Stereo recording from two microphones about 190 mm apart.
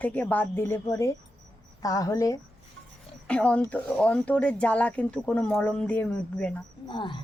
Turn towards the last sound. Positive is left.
turn(degrees=25)  # may be behind; listen again after turning